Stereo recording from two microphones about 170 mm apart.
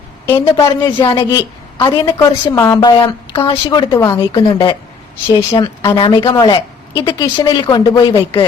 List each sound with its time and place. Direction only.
0.3 s speech: 25° left (ahead or behind)
2.1 s a woman's voice: 15° left (ahead or behind)
3.0 s speech: 30° left (ahead or behind)